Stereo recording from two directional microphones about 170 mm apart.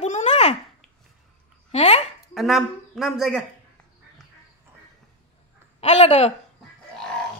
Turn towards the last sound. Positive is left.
turn(degrees=35)  # may be behind; listen again after turning